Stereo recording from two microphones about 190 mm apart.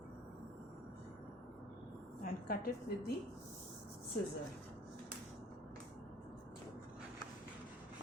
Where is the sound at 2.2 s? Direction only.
50° left (ahead or behind).